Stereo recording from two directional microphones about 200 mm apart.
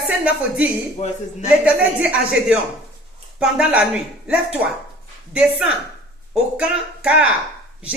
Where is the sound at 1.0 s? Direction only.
35° left (ahead or behind).